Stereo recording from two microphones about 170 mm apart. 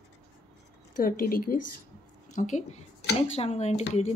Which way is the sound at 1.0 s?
60° left (ahead or behind).